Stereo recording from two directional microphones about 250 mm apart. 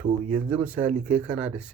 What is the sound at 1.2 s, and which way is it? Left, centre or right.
Speech, centre.